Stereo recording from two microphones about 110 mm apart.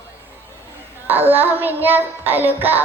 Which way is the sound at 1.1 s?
15° right (ahead or behind).